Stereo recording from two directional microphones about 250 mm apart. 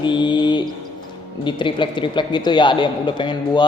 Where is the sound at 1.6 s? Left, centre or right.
Centre.